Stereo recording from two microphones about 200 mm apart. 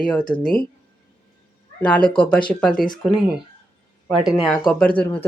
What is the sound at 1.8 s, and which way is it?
Speech, 5° left (ahead or behind).